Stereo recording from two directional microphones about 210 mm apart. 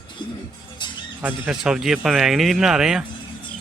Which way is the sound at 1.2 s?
5° right (ahead or behind).